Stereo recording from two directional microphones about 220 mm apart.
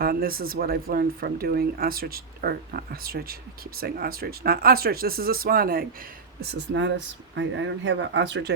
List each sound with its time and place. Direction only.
0.0 s speech: 40° right (ahead or behind)